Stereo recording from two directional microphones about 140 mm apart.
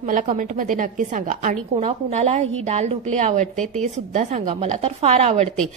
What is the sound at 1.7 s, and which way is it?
A woman's voice, 50° right (ahead or behind).